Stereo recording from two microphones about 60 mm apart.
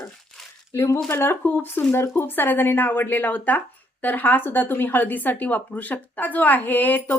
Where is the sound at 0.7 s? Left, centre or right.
Left.